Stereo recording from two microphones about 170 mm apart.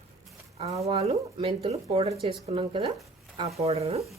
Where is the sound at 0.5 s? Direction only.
40° right (ahead or behind).